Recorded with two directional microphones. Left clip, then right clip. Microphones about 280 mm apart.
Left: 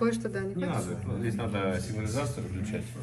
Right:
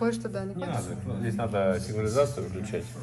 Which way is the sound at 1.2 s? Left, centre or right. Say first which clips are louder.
Right 5 dB; right.